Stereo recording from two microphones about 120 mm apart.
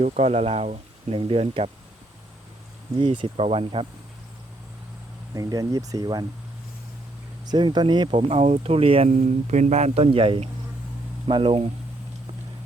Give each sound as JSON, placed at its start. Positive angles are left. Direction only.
{"t": 0.0, "sound": "speech", "side_deg": -65}
{"t": 3.0, "sound": "speech", "side_deg": -45}
{"t": 5.3, "sound": "speech", "side_deg": -30}
{"t": 7.5, "sound": "speech", "side_deg": -35}
{"t": 8.3, "sound": "speech", "side_deg": -65}
{"t": 9.0, "sound": "speech", "side_deg": -80}